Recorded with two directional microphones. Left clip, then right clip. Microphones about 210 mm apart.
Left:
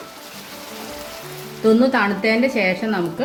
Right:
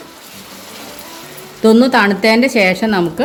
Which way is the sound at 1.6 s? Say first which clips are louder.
Right 6 dB; 55° right (ahead or behind).